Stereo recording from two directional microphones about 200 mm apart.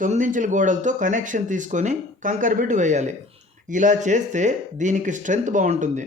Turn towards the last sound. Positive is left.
turn(degrees=-40)  # may be behind; listen again after turning